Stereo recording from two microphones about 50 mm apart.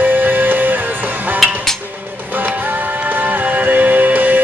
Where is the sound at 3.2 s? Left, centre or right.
Right.